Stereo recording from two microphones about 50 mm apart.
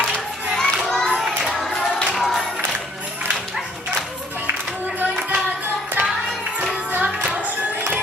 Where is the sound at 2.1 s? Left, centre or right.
Centre.